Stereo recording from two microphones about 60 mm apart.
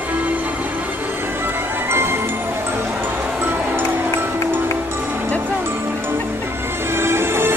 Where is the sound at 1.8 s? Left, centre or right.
Right.